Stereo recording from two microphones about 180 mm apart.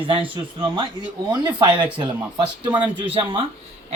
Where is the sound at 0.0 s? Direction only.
30° right (ahead or behind).